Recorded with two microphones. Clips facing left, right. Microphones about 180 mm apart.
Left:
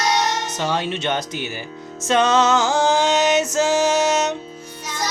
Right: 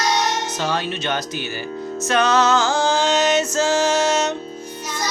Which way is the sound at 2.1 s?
25° left (ahead or behind).